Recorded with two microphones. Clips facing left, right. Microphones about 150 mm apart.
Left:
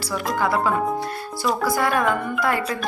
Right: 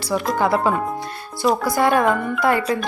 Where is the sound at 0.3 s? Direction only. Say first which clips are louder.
Right 1 dB; 25° right (ahead or behind).